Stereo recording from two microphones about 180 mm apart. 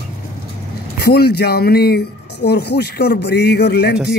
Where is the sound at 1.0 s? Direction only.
60° left (ahead or behind).